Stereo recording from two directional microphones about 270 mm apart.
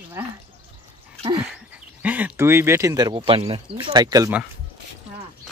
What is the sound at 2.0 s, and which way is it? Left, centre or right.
A woman's voice, centre.